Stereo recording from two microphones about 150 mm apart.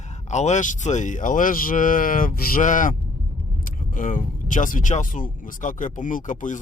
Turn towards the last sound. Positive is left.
turn(degrees=60)  # may be behind; listen again after turning